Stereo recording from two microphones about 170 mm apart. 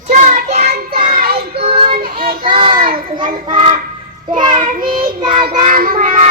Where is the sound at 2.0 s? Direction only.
60° right (ahead or behind).